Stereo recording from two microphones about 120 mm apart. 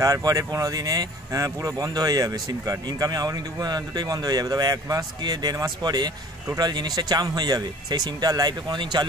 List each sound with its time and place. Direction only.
0.0 s speech: 30° right (ahead or behind)